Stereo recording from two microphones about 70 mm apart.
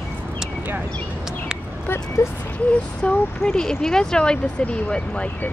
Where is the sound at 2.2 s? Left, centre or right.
Left.